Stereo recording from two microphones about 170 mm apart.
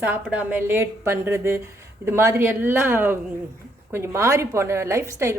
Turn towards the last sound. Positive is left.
turn(degrees=-15)  # may be behind; listen again after turning